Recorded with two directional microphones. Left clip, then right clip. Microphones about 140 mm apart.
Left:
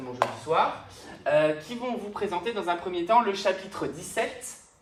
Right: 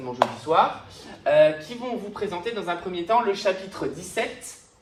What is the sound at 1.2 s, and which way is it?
Speech, 15° left (ahead or behind).